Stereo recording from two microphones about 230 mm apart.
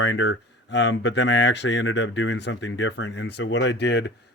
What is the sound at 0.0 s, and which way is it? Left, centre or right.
Speech, left.